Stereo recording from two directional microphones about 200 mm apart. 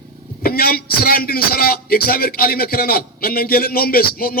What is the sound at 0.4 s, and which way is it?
A man's voice, 50° left (ahead or behind).